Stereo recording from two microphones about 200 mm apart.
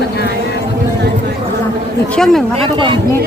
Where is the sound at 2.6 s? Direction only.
25° right (ahead or behind).